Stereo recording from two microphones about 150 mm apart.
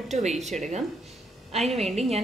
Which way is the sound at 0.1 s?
50° right (ahead or behind).